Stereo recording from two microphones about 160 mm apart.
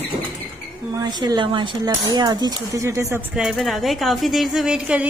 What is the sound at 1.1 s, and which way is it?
Speech, 25° right (ahead or behind).